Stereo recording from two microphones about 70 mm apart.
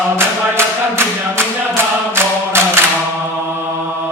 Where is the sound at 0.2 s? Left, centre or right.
Right.